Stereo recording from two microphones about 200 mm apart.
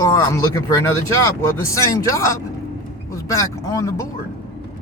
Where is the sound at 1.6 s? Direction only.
15° left (ahead or behind).